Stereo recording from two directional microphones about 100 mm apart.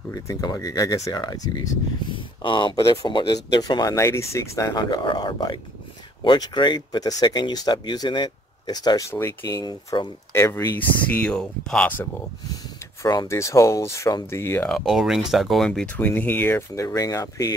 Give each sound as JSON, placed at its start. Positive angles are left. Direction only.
{"t": 0.1, "sound": "speech", "side_deg": 35}
{"t": 2.1, "sound": "speech", "side_deg": 55}
{"t": 4.7, "sound": "speech", "side_deg": 50}
{"t": 9.1, "sound": "speech", "side_deg": 25}
{"t": 9.5, "sound": "speech", "side_deg": 40}
{"t": 10.3, "sound": "speech", "side_deg": 30}
{"t": 12.6, "sound": "a sound", "side_deg": 45}
{"t": 13.3, "sound": "speech", "side_deg": 30}
{"t": 14.7, "sound": "speech", "side_deg": 0}
{"t": 16.0, "sound": "speech", "side_deg": 20}